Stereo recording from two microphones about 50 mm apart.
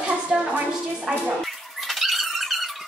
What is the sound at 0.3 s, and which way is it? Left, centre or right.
Music, right.